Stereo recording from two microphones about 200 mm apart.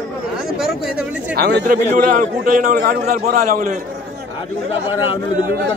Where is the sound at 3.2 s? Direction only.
35° right (ahead or behind).